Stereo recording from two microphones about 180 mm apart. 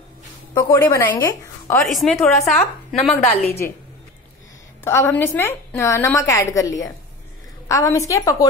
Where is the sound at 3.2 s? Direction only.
35° left (ahead or behind).